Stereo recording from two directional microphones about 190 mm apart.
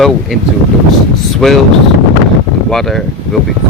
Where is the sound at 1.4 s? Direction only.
5° left (ahead or behind).